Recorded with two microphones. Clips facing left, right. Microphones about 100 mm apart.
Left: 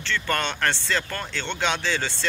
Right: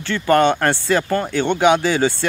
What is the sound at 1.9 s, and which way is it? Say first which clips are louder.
Speech: right 10 dB; 15° right (ahead or behind).